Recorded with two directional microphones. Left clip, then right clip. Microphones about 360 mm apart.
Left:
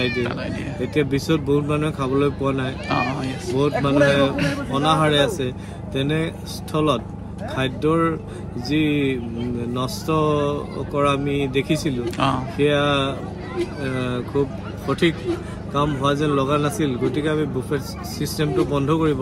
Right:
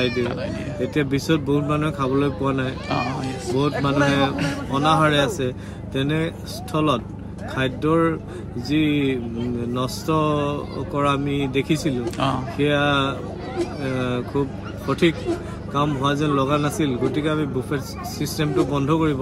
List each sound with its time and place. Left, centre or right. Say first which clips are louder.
0.2 s a man's voice: even; centre